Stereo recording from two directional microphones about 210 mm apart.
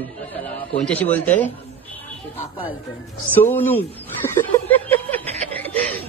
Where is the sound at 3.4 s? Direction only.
10° left (ahead or behind).